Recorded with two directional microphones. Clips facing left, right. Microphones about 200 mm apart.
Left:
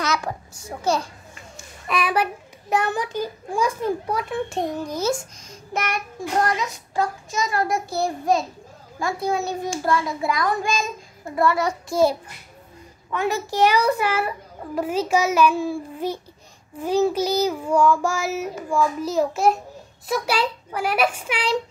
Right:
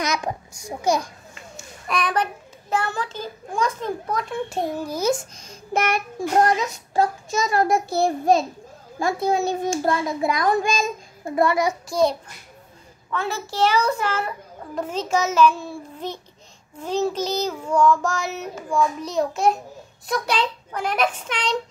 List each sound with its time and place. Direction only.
0.0 s a child's voice: 15° right (ahead or behind)
1.9 s a child's voice: 5° left (ahead or behind)
2.7 s child singing: 15° left (ahead or behind); by 5.1 s 10° right (ahead or behind)
5.7 s a child's voice: 30° right (ahead or behind)
11.3 s child singing: 15° right (ahead or behind)
11.9 s a child's voice: 5° left (ahead or behind)
13.1 s child singing: 15° left (ahead or behind)